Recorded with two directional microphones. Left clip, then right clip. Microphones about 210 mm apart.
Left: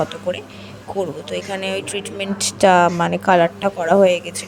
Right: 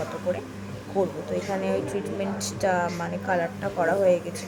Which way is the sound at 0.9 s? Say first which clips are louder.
Left 3 dB; 40° left (ahead or behind).